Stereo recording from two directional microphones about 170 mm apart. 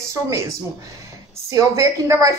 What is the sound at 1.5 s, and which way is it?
Speech, 20° right (ahead or behind).